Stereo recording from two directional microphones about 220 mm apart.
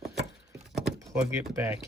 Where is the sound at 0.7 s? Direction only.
Centre (ahead or behind).